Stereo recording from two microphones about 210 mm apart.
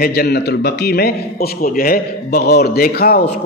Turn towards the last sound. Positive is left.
turn(degrees=45)  # may be behind; listen again after turning